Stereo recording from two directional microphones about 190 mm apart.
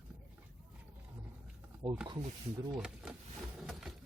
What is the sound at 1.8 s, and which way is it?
Speech, 20° right (ahead or behind).